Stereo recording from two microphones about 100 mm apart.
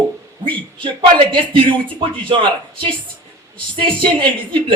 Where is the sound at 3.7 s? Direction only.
55° right (ahead or behind).